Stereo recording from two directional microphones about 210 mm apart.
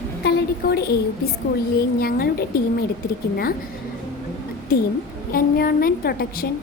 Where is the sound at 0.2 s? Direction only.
50° left (ahead or behind).